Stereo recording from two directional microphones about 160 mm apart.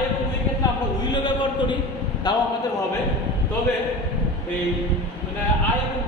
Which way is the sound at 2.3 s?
25° left (ahead or behind).